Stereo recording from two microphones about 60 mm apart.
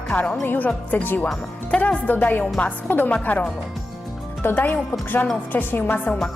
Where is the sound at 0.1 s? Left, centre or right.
Centre.